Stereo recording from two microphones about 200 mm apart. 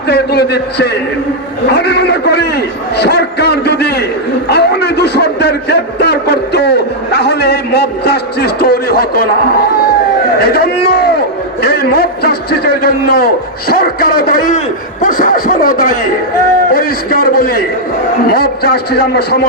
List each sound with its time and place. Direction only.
0.1 s a man's voice: 55° left (ahead or behind)
1.7 s a sound: 55° left (ahead or behind)
10.4 s a man's voice: 50° left (ahead or behind)